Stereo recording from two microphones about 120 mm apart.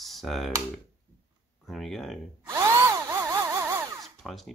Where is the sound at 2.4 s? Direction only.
25° right (ahead or behind).